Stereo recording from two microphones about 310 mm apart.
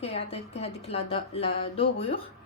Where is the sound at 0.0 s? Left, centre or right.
Centre.